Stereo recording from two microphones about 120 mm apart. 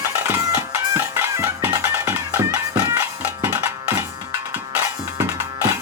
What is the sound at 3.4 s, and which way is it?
Music, 20° right (ahead or behind).